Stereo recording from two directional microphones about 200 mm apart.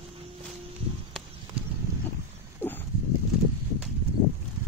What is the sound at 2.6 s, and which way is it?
Dog, 10° left (ahead or behind).